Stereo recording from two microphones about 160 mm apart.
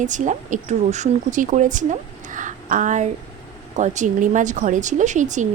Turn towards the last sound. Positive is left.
turn(degrees=-50)  # may be behind; listen again after turning